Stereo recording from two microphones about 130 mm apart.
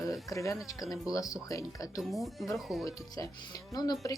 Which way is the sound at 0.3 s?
25° left (ahead or behind).